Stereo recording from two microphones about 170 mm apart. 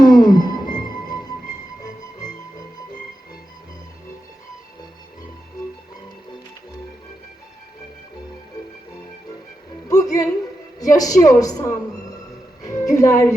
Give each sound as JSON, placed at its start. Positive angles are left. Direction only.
{"t": 0.0, "sound": "music", "side_deg": 25}
{"t": 9.9, "sound": "music", "side_deg": 20}
{"t": 10.8, "sound": "a woman's voice", "side_deg": 20}
{"t": 12.6, "sound": "music", "side_deg": 20}